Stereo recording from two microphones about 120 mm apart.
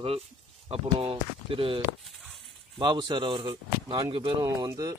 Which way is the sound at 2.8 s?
40° right (ahead or behind).